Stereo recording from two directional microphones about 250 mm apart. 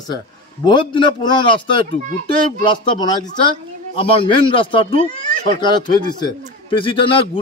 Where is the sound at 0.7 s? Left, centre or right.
Centre.